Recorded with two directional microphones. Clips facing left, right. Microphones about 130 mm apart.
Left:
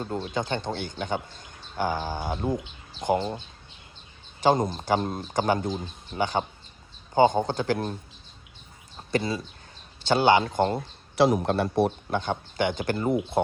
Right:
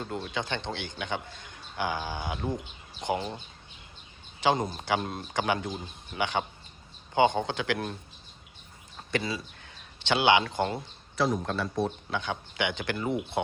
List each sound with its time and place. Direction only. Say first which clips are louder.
0.0 s speech: left 4 dB; 35° left (ahead or behind)
2.4 s speech: left 5 dB; 5° left (ahead or behind)
3.2 s speech: left 5 dB; 30° left (ahead or behind)
9.1 s speech: left 4 dB; 40° left (ahead or behind)
11.2 s a man's voice: left 6 dB; 65° left (ahead or behind)
12.1 s speech: left 5 dB; 45° left (ahead or behind)